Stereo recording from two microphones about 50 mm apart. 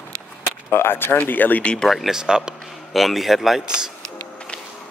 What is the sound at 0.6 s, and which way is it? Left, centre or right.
Speech, left.